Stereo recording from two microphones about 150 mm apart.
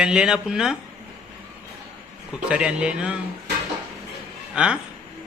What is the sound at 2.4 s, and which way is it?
Speech, 5° right (ahead or behind).